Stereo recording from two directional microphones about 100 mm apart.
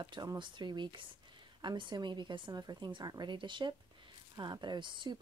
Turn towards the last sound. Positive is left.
turn(degrees=-50)  # may be behind; listen again after turning